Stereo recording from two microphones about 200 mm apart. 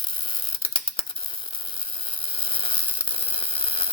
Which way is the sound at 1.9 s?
25° left (ahead or behind).